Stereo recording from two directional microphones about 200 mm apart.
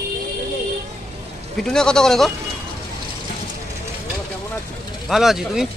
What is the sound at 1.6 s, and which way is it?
Speech, 5° left (ahead or behind).